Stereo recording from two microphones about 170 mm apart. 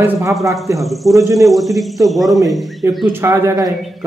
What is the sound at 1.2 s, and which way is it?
Speech, 20° right (ahead or behind).